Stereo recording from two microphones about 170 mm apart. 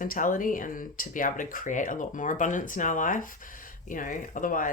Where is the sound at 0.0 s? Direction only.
50° left (ahead or behind).